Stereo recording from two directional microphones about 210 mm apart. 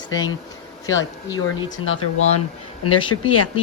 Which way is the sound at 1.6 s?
70° left (ahead or behind).